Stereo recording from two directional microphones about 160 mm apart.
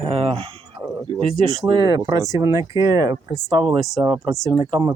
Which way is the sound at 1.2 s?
30° right (ahead or behind).